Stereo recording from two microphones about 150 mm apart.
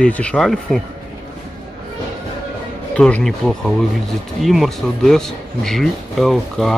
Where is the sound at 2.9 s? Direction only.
5° left (ahead or behind).